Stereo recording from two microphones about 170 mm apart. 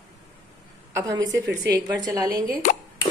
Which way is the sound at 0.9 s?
20° right (ahead or behind).